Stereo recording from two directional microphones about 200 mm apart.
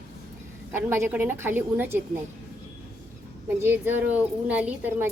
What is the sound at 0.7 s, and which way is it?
Speech, 10° right (ahead or behind).